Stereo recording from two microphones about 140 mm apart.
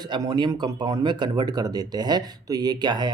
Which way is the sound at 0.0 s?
30° right (ahead or behind).